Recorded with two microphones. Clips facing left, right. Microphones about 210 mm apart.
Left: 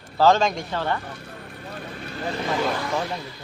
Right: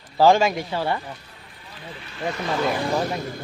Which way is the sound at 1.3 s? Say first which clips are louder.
Left 9 dB; 55° left (ahead or behind).